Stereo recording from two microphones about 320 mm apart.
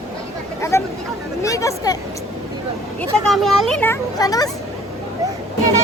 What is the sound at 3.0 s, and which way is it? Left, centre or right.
Speech, centre.